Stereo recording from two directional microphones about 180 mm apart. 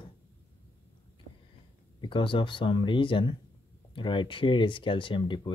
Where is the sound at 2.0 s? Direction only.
30° left (ahead or behind).